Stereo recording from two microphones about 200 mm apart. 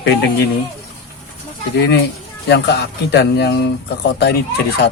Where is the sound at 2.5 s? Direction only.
55° left (ahead or behind).